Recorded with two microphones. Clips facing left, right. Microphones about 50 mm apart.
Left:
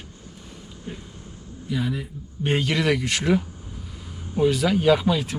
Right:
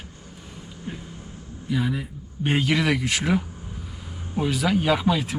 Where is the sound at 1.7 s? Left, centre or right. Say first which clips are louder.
Right 1 dB; centre.